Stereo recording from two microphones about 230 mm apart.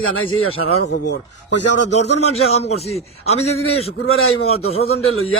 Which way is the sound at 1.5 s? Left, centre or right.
Left.